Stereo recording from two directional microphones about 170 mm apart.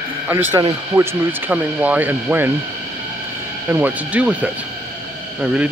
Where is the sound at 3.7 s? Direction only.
10° right (ahead or behind).